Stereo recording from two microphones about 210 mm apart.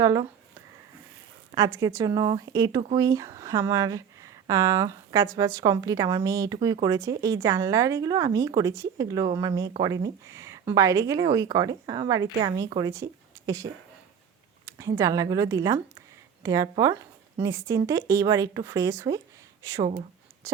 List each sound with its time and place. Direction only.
0.0 s speech: 15° right (ahead or behind)
1.5 s speech: 15° right (ahead or behind)
20.4 s writing: 15° right (ahead or behind)